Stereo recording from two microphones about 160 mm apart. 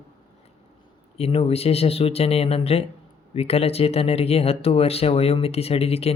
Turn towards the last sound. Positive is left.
turn(degrees=40)  # may be behind; listen again after turning